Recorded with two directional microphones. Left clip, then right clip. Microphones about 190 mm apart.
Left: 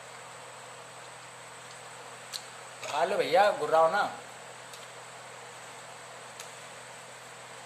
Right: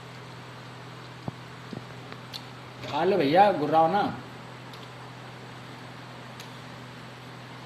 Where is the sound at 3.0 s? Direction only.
20° left (ahead or behind).